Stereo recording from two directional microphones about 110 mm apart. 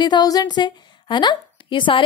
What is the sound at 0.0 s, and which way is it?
A woman's voice, 40° left (ahead or behind).